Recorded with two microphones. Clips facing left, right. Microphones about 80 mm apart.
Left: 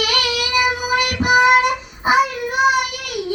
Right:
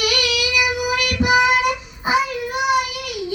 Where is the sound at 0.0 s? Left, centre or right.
Left.